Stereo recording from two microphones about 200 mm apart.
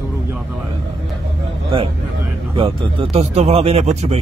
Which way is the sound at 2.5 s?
25° right (ahead or behind).